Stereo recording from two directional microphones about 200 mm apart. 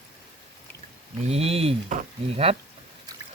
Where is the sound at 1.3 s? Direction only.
30° right (ahead or behind).